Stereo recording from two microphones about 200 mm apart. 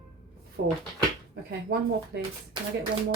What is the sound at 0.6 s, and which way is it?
Speech, 55° right (ahead or behind).